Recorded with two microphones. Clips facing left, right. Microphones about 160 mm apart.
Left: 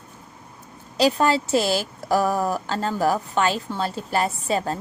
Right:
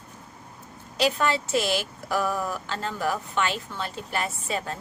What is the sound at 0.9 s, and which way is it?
A woman's voice, 35° left (ahead or behind).